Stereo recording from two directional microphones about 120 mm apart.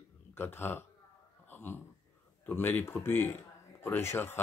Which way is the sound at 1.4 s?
15° left (ahead or behind).